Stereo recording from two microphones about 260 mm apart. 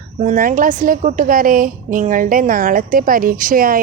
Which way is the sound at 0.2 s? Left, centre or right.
Right.